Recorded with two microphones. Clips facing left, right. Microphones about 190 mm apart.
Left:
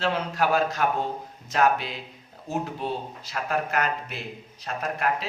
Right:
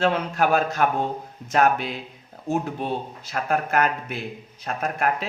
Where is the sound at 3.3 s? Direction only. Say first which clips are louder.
Right 3 dB; 50° right (ahead or behind).